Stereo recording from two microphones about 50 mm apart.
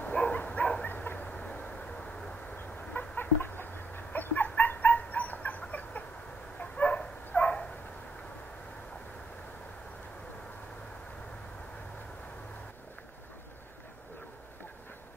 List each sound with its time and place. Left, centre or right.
0.1 s dog: centre
0.8 s bow-wow: left
1.3 s vehicle: left
2.5 s chicken: left
6.6 s dog: left